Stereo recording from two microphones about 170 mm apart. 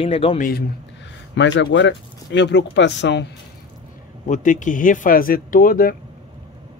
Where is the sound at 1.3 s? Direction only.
90° left.